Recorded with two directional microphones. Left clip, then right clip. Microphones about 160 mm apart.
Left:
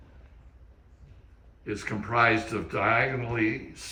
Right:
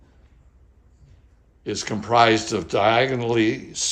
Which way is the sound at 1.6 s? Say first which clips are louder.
Right 6 dB; 25° right (ahead or behind).